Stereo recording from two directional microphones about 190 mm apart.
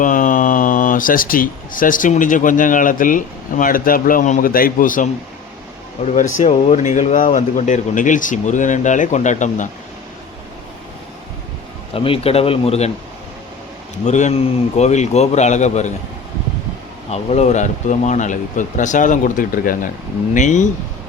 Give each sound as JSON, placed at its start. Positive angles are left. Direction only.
{"t": 0.0, "sound": "speech", "side_deg": 45}
{"t": 6.1, "sound": "speech", "side_deg": 40}
{"t": 11.9, "sound": "speech", "side_deg": 30}
{"t": 14.0, "sound": "speech", "side_deg": 40}
{"t": 17.1, "sound": "speech", "side_deg": 35}